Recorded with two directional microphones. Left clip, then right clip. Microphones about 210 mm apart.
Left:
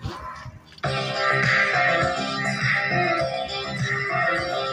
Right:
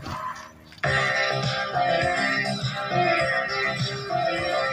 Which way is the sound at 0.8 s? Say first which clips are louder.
Right 4 dB; 15° right (ahead or behind).